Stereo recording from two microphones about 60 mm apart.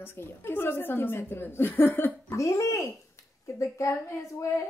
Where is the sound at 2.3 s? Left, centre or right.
Left.